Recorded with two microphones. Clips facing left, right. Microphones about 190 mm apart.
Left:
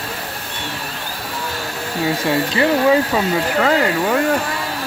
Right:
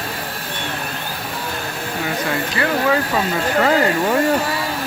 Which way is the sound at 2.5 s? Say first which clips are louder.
Left 4 dB; 20° left (ahead or behind).